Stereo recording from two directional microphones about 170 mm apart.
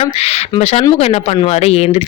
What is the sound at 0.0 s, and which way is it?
Speech, 40° left (ahead or behind).